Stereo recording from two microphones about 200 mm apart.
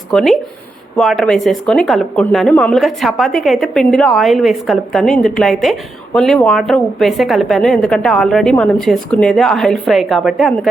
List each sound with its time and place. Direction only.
0.1 s speech: centre (ahead or behind)